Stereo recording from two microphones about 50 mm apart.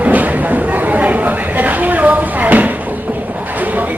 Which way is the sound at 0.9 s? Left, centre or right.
Right.